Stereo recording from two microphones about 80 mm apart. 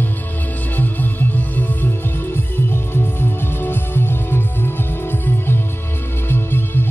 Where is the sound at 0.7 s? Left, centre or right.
Left.